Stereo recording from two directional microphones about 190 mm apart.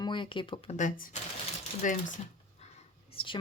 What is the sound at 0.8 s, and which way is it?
Speech, 40° left (ahead or behind).